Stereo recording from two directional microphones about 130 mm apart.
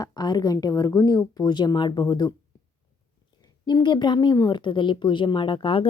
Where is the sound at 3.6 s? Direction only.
35° left (ahead or behind).